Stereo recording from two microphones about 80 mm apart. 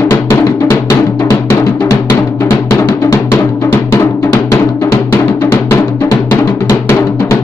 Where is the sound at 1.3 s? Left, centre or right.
Left.